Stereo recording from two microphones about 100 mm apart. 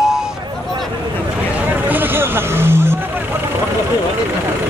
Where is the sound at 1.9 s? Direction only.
20° right (ahead or behind).